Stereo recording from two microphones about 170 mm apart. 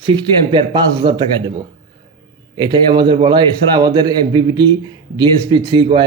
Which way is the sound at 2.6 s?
25° right (ahead or behind).